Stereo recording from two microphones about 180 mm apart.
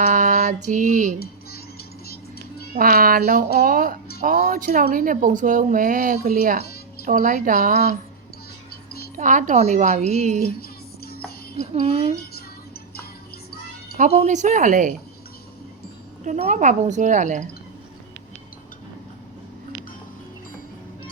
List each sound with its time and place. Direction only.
0.0 s female singing: 45° right (ahead or behind)
1.2 s music: 60° left (ahead or behind)
2.7 s speech: 55° right (ahead or behind)
9.1 s a woman's voice: 45° right (ahead or behind)
10.6 s music: 60° left (ahead or behind)
11.6 s a woman's voice: 35° right (ahead or behind)
14.0 s speech: 40° right (ahead or behind)
16.2 s speech: 40° right (ahead or behind)